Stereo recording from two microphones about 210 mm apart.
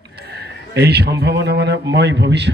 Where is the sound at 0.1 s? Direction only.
50° right (ahead or behind).